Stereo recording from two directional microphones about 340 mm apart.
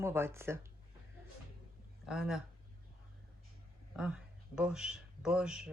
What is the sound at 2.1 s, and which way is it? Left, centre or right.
Speech, centre.